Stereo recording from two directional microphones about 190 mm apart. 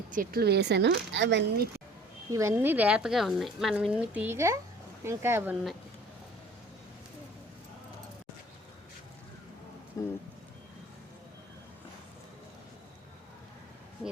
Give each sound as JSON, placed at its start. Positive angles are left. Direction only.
{"t": 0.1, "sound": "speech", "side_deg": -50}
{"t": 2.3, "sound": "speech", "side_deg": -15}
{"t": 10.0, "sound": "speech", "side_deg": 15}